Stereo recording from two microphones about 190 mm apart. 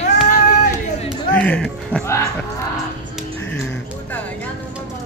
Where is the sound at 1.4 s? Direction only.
5° left (ahead or behind).